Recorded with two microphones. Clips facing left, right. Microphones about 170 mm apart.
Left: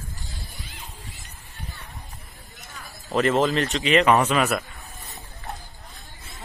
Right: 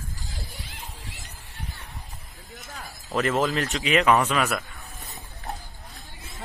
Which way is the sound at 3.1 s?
Centre (ahead or behind).